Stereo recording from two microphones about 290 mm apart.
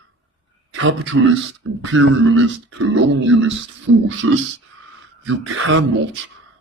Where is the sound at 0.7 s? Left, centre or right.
Right.